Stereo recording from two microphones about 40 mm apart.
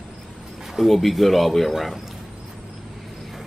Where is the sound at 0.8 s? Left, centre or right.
Centre.